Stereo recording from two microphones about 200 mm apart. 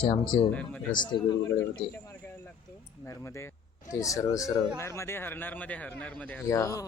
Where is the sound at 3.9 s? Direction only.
15° left (ahead or behind).